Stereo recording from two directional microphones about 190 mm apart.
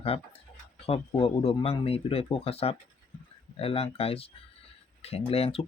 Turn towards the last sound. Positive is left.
turn(degrees=30)  # may be behind; listen again after turning